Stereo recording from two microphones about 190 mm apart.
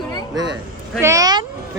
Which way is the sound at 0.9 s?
15° right (ahead or behind).